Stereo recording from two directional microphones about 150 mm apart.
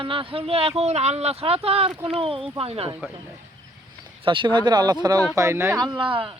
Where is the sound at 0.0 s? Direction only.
35° right (ahead or behind).